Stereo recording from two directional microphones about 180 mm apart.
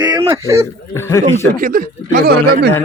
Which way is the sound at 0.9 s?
15° left (ahead or behind).